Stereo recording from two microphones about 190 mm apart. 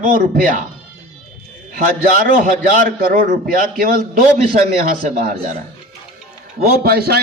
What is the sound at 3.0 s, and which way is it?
Speech, 50° right (ahead or behind).